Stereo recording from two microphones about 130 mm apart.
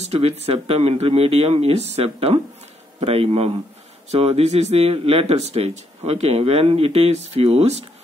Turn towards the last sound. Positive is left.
turn(degrees=-55)  # may be behind; listen again after turning